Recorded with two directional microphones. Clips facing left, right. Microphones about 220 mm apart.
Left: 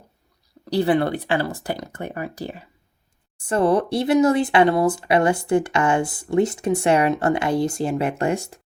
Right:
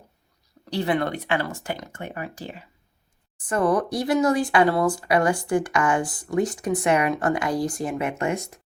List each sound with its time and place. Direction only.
0.6 s speech: 35° left (ahead or behind)